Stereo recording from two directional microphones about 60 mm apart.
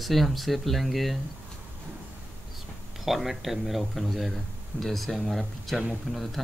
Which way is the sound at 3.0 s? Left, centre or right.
Centre.